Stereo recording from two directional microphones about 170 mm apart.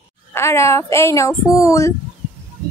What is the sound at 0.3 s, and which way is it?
Speech, 15° left (ahead or behind).